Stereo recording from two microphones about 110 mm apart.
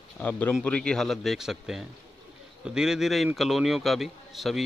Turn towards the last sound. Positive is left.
turn(degrees=0)  # may be behind; listen again after turning